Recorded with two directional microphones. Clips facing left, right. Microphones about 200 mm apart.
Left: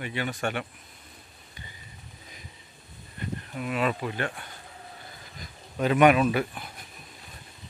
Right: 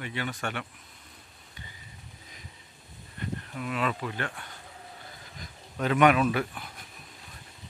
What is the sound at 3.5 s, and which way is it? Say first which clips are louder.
Speech: left 3 dB; 15° left (ahead or behind).